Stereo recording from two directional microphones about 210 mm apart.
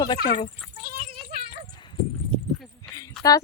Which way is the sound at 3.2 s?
Centre (ahead or behind).